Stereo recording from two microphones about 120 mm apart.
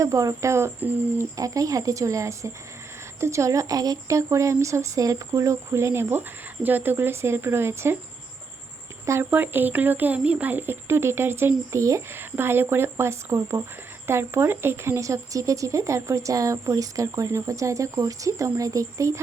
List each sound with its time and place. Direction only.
0.0 s speech: 25° right (ahead or behind)
1.4 s speech: 30° right (ahead or behind)
9.0 s speech: 20° right (ahead or behind)